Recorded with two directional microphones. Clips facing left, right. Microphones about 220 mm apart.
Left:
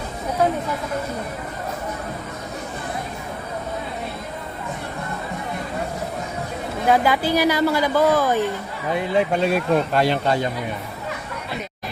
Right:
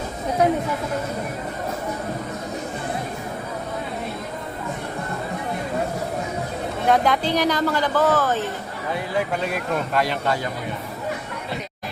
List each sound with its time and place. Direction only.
6.8 s speech: 5° left (ahead or behind); by 10.5 s 25° left (ahead or behind)